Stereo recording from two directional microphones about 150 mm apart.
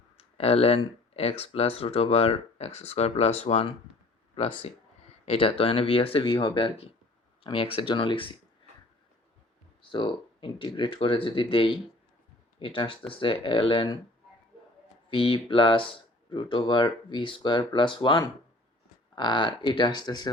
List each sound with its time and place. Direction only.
0.2 s speech: 40° left (ahead or behind)
5.2 s speech: 40° left (ahead or behind)
9.9 s speech: 30° left (ahead or behind)
15.1 s speech: 35° left (ahead or behind)